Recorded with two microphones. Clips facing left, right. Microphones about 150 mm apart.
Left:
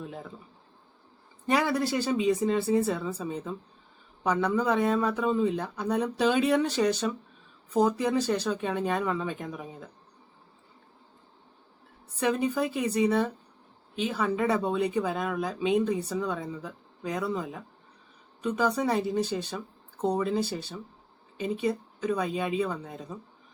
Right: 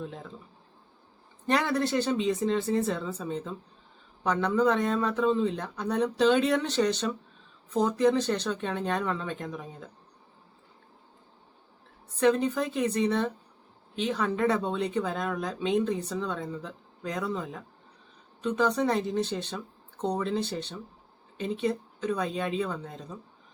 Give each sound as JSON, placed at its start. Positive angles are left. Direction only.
{"t": 0.0, "sound": "speech", "side_deg": 5}
{"t": 1.5, "sound": "speech", "side_deg": 10}
{"t": 12.2, "sound": "speech", "side_deg": 10}